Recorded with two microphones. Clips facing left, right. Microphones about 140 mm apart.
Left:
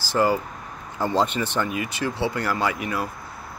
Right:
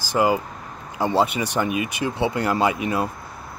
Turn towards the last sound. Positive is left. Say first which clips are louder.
# right 4 dB
turn(degrees=-20)  # may be behind; listen again after turning